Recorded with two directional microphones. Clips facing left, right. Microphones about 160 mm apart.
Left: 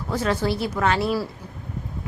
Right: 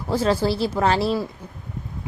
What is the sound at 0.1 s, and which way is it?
A woman's voice, 30° right (ahead or behind).